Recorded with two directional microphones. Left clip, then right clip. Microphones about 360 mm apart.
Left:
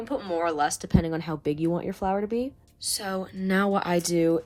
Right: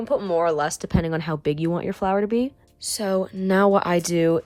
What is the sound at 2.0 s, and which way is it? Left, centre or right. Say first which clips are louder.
Speech: right 5 dB; left.